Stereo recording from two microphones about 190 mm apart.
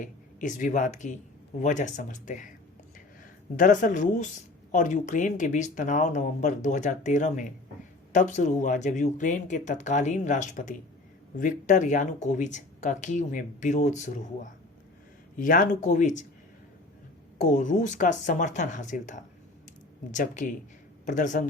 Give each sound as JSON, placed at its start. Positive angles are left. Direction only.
{"t": 0.0, "sound": "speech", "side_deg": 45}
{"t": 3.5, "sound": "speech", "side_deg": 45}
{"t": 17.5, "sound": "speech", "side_deg": 45}